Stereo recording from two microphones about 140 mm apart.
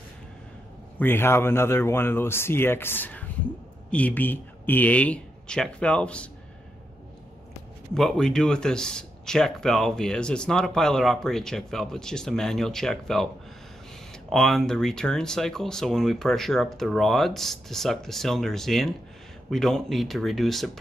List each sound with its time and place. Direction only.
0.9 s speech: 15° left (ahead or behind)
7.9 s speech: 5° left (ahead or behind)
14.3 s speech: centre (ahead or behind)